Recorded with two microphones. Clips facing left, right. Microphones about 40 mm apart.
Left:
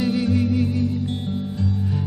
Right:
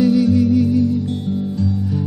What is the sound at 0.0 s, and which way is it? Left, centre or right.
Music, left.